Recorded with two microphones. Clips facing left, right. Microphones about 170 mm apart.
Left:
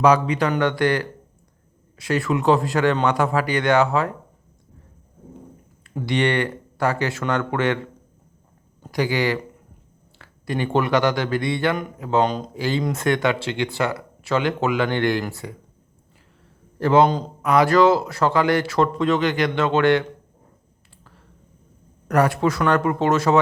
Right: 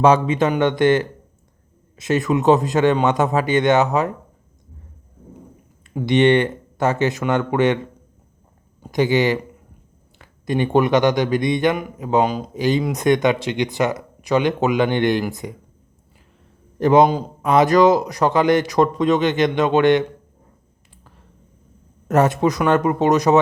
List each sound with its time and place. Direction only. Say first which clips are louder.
0.0 s speech: right 2 dB; 25° right (ahead or behind)
5.9 s speech: right 6 dB; 20° right (ahead or behind)
8.8 s speech: right 5 dB; 20° right (ahead or behind)
12.5 s speech: right 7 dB; 20° right (ahead or behind)
16.7 s speech: right 3 dB; 20° right (ahead or behind)
22.0 s speech: right 2 dB; 25° right (ahead or behind)